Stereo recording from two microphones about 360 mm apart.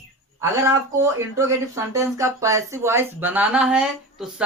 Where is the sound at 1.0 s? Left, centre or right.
Centre.